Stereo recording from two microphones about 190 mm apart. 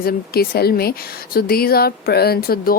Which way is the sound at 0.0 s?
55° left (ahead or behind).